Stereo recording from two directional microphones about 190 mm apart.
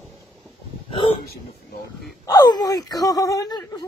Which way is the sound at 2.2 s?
20° left (ahead or behind).